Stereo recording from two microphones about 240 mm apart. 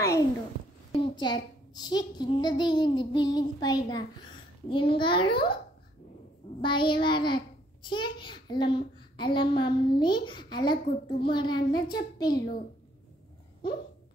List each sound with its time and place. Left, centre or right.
0.9 s a child's voice: centre
6.6 s a child's voice: centre